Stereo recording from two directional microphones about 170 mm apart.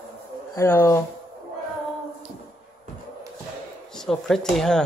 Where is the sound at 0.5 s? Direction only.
15° left (ahead or behind).